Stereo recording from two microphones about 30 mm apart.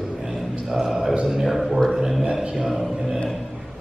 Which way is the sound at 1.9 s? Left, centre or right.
Centre.